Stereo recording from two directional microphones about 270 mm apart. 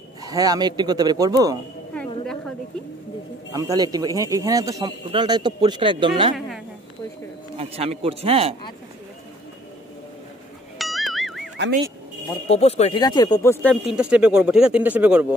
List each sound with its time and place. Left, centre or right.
0.2 s speech: centre
3.5 s speech: centre
7.5 s speech: right
10.8 s music: centre
12.4 s speech: left; by 15.2 s centre